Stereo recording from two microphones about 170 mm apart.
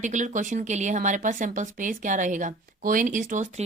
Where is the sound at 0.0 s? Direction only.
45° right (ahead or behind).